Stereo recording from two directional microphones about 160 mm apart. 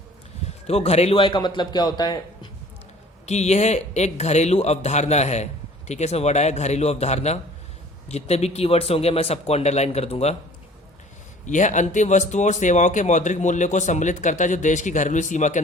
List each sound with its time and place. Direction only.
0.7 s a man's voice: 40° left (ahead or behind); by 2.5 s 25° left (ahead or behind)
3.2 s speech: 45° left (ahead or behind)
11.4 s speech: 50° left (ahead or behind)